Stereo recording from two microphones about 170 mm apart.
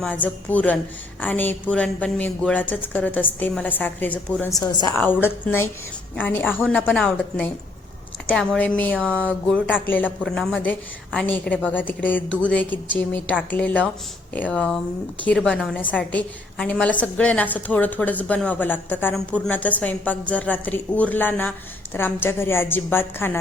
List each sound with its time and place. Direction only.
0.0 s a woman's voice: 10° left (ahead or behind)
4.5 s a woman's voice: 25° left (ahead or behind)
4.9 s a woman's voice: 10° left (ahead or behind)